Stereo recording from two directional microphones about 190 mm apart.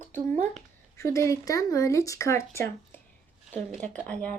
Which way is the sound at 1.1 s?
15° left (ahead or behind).